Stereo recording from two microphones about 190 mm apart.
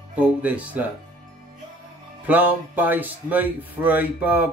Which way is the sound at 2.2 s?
10° right (ahead or behind).